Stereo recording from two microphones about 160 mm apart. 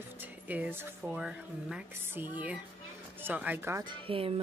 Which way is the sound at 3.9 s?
35° right (ahead or behind).